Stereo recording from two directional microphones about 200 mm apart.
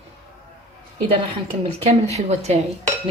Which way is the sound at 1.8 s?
35° right (ahead or behind).